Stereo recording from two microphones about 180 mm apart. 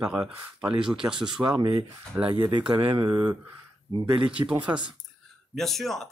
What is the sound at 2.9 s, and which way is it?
Speech, 25° right (ahead or behind).